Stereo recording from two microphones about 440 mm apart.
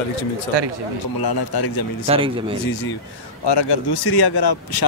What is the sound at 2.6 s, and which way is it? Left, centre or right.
Speech, left.